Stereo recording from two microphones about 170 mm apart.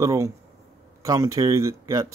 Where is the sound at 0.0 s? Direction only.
20° right (ahead or behind).